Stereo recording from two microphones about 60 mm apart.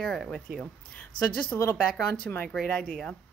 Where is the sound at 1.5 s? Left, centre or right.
Left.